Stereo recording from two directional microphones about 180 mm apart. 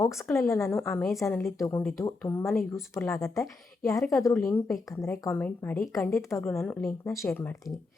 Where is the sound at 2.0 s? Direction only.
15° left (ahead or behind).